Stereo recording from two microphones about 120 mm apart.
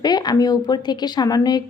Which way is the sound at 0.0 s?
35° left (ahead or behind).